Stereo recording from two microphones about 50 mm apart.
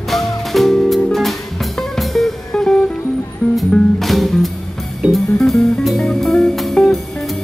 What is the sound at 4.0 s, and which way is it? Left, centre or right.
Music, centre.